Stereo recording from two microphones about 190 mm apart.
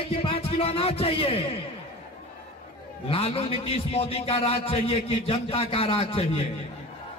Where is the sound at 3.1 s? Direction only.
30° left (ahead or behind).